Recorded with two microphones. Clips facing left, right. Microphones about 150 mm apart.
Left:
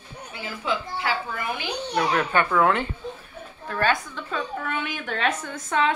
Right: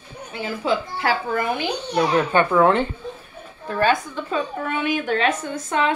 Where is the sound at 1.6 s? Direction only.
25° right (ahead or behind).